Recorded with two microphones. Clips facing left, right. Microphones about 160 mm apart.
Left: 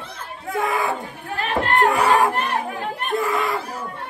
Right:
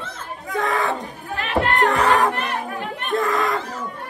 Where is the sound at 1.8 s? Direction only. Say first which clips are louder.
Left 1 dB; 5° left (ahead or behind).